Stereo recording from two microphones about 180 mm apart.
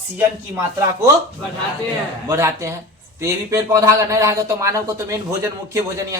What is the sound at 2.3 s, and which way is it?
A man's voice, 15° right (ahead or behind).